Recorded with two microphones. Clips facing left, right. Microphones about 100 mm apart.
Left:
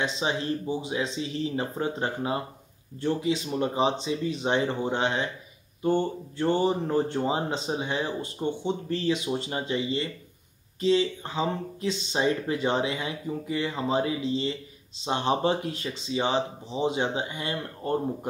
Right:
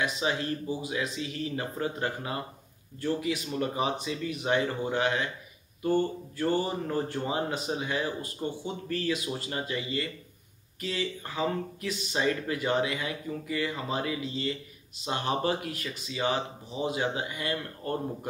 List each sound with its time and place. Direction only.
0.0 s speech: 25° left (ahead or behind)